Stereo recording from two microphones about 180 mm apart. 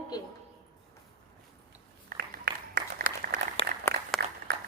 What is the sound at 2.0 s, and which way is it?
Applause, 55° right (ahead or behind).